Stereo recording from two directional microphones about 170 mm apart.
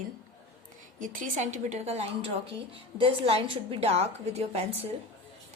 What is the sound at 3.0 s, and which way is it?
A woman's voice, 35° right (ahead or behind).